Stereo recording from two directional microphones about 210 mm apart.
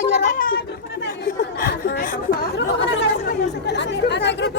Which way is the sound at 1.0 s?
50° left (ahead or behind).